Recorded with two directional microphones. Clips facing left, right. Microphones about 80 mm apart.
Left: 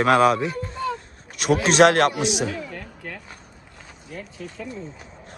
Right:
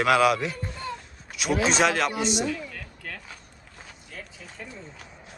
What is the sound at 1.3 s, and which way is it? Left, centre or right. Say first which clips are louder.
Speech: left 6 dB; left.